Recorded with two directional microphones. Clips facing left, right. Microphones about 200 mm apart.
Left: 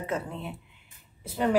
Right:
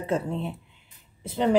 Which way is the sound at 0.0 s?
30° right (ahead or behind).